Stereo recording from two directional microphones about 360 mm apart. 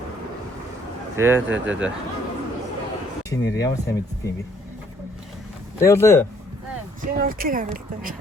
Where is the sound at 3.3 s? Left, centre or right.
Centre.